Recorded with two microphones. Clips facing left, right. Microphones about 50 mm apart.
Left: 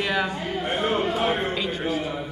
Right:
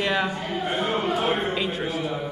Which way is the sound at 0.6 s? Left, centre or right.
Left.